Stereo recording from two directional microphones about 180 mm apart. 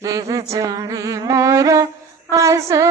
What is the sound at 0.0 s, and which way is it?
Music, 20° right (ahead or behind).